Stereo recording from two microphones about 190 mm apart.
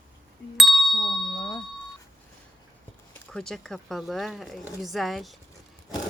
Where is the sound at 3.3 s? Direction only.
5° left (ahead or behind).